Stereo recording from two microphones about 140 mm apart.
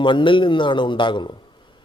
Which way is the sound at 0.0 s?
35° left (ahead or behind).